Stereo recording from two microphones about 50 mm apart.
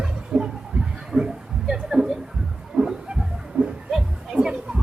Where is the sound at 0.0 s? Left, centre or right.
Centre.